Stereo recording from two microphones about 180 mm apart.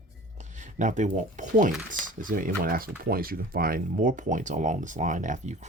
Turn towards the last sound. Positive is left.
turn(degrees=-40)  # may be behind; listen again after turning